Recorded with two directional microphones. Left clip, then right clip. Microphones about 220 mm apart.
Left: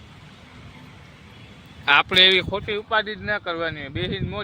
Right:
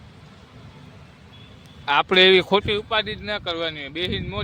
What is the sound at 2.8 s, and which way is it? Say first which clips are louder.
Speech: left 1 dB; 5° right (ahead or behind).